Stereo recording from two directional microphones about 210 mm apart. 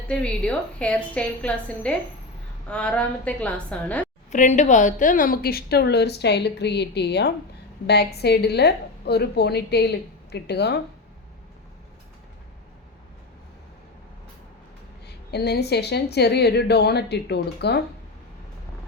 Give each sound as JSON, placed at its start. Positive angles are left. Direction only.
{"t": 0.1, "sound": "a woman's voice", "side_deg": 5}
{"t": 4.3, "sound": "a woman's voice", "side_deg": 35}
{"t": 15.0, "sound": "a woman's voice", "side_deg": 50}